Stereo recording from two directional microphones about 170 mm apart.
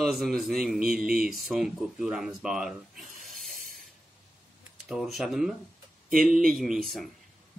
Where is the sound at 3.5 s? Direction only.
55° right (ahead or behind).